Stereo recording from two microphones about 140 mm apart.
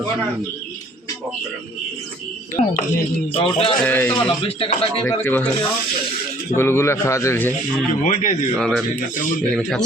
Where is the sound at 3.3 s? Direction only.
40° left (ahead or behind).